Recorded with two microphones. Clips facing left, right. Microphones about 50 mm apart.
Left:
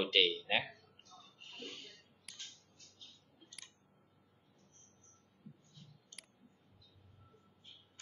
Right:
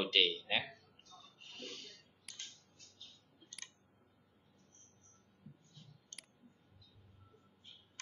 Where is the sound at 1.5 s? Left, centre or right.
Centre.